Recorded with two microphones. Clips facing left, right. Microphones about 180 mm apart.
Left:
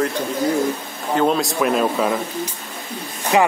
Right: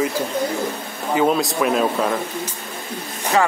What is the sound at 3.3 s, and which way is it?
Speech, 15° left (ahead or behind).